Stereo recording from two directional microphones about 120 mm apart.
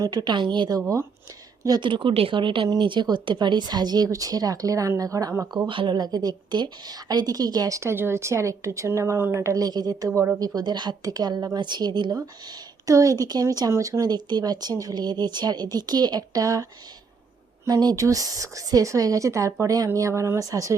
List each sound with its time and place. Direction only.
0.0 s a woman's voice: 35° right (ahead or behind)
5.6 s a woman's voice: 45° right (ahead or behind)
10.1 s a woman's voice: 20° right (ahead or behind)
10.4 s a woman's voice: 35° right (ahead or behind)
17.7 s a woman's voice: 30° right (ahead or behind)